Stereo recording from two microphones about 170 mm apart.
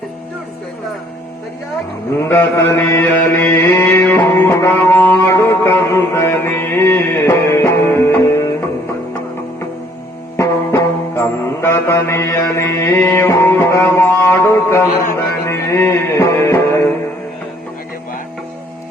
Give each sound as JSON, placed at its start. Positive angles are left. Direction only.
{"t": 2.1, "sound": "mantra", "side_deg": 15}
{"t": 10.3, "sound": "music", "side_deg": 15}